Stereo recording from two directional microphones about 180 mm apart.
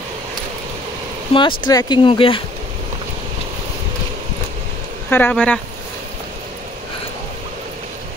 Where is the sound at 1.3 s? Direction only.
25° left (ahead or behind).